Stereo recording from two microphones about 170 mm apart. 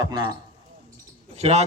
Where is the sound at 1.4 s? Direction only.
40° right (ahead or behind).